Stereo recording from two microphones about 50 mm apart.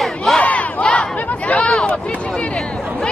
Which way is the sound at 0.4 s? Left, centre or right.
Left.